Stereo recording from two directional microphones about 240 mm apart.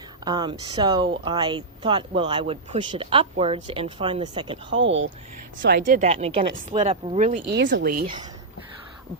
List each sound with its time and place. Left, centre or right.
0.3 s speech: centre
4.8 s speech: right
5.6 s speech: right
7.5 s speech: right